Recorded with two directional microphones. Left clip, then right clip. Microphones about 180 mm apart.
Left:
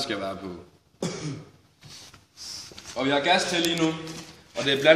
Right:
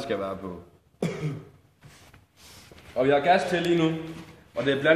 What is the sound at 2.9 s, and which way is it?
Speech, 45° right (ahead or behind).